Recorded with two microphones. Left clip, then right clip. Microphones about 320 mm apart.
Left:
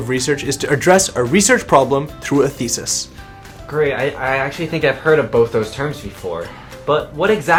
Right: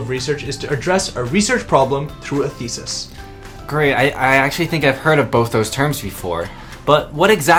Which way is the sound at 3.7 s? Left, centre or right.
Right.